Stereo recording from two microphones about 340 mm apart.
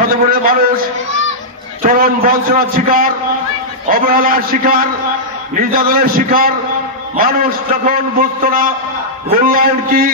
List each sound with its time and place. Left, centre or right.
0.0 s a man's voice: right
1.8 s a man's voice: right